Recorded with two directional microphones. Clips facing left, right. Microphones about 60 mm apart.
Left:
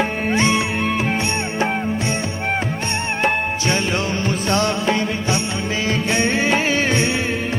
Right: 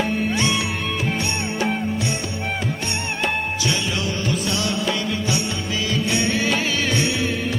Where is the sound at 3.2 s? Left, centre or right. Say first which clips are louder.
Left 4 dB; left.